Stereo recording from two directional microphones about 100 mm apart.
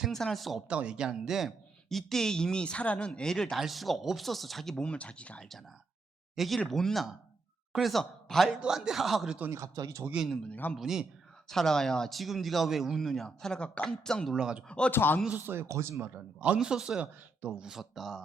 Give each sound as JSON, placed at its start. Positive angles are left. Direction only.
{"t": 0.0, "sound": "speech", "side_deg": 5}
{"t": 6.3, "sound": "speech", "side_deg": 0}
{"t": 9.5, "sound": "speech", "side_deg": -35}
{"t": 10.5, "sound": "speech", "side_deg": 15}
{"t": 10.8, "sound": "speech", "side_deg": -5}
{"t": 14.3, "sound": "speech", "side_deg": -10}
{"t": 14.7, "sound": "speech", "side_deg": 10}
{"t": 14.9, "sound": "speech", "side_deg": 20}
{"t": 15.4, "sound": "speech", "side_deg": -20}